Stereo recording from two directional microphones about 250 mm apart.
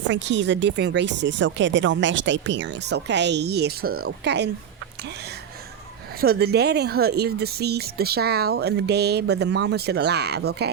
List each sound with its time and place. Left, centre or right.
0.1 s speech: right
6.1 s speech: right